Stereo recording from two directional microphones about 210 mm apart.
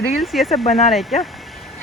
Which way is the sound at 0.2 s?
Centre (ahead or behind).